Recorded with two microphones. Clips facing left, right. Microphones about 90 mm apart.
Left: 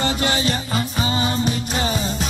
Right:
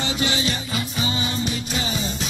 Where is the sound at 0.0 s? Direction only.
45° left (ahead or behind).